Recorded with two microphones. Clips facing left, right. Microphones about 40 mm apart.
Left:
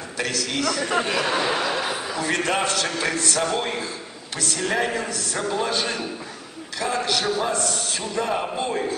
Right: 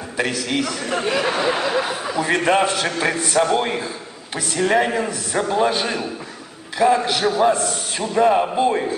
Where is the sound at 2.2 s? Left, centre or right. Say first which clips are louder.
Right 6 dB; centre.